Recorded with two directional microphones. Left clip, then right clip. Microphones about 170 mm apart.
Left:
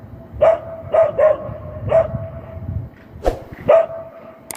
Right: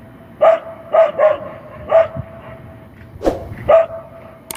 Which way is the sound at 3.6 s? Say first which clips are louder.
Right 1 dB; 45° left (ahead or behind).